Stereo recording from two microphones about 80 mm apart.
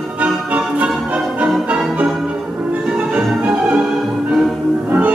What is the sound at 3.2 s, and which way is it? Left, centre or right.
Music, centre.